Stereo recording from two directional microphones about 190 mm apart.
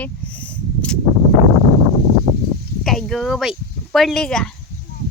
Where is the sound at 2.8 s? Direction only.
Centre (ahead or behind).